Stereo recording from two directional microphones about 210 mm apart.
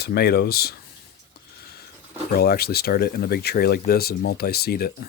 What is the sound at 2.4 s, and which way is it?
Speech, 45° left (ahead or behind).